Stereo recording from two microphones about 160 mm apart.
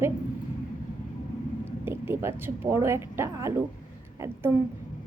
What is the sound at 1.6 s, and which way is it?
Speech, 15° right (ahead or behind).